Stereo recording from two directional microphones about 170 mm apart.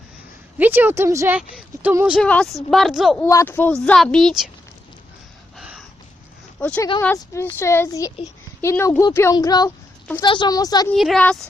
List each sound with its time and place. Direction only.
0.6 s a woman's voice: 10° right (ahead or behind)
1.4 s a woman's voice: 5° right (ahead or behind)
2.2 s speech: 5° left (ahead or behind)
3.2 s speech: 15° left (ahead or behind)
5.5 s a sound: 5° right (ahead or behind)
6.6 s a woman's voice: 10° left (ahead or behind)
10.9 s speech: centre (ahead or behind)